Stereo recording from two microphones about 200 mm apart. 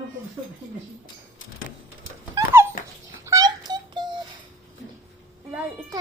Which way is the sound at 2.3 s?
10° right (ahead or behind).